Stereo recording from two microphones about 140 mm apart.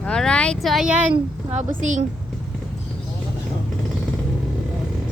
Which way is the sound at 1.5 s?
60° right (ahead or behind).